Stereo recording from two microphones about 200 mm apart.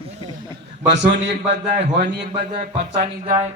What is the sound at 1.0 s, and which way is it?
A man's voice, 65° right (ahead or behind).